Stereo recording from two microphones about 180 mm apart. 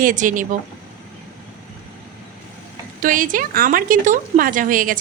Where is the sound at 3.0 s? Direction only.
50° right (ahead or behind).